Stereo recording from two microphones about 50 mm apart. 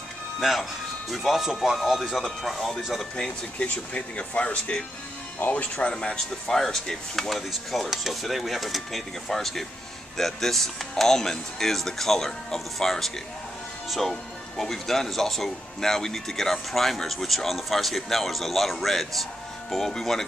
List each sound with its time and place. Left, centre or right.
0.4 s speech: centre
3.5 s speech: left
5.9 s speech: centre